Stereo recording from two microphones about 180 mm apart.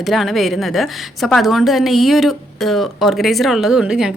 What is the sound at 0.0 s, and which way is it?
A woman's voice, centre (ahead or behind).